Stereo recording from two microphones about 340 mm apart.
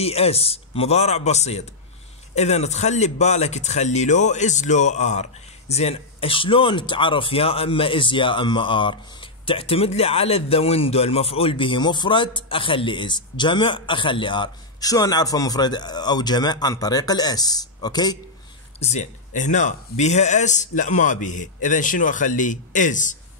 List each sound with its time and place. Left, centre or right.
0.0 s speech: centre